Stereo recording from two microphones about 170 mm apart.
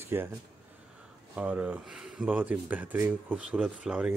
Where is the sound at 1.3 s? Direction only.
5° right (ahead or behind).